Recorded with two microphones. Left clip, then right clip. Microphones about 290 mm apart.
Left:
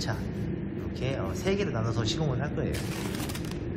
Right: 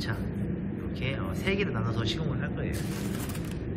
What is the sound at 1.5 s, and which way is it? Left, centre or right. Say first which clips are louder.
Speech: even; centre.